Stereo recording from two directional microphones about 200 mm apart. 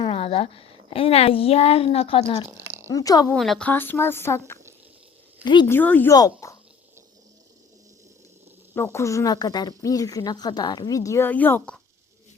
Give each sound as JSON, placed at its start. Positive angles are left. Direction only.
{"t": 0.0, "sound": "a sound", "side_deg": 30}
{"t": 0.9, "sound": "speech", "side_deg": 30}
{"t": 3.3, "sound": "speech", "side_deg": 0}
{"t": 5.7, "sound": "speech", "side_deg": 10}
{"t": 8.7, "sound": "speech", "side_deg": 15}